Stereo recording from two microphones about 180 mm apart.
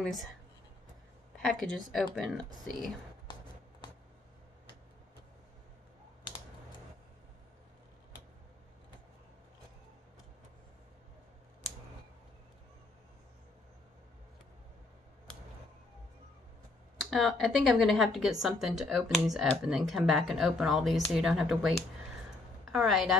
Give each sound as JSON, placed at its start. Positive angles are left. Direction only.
{"t": 0.0, "sound": "speech", "side_deg": 0}
{"t": 1.4, "sound": "speech", "side_deg": 5}
{"t": 17.0, "sound": "a woman's voice", "side_deg": 0}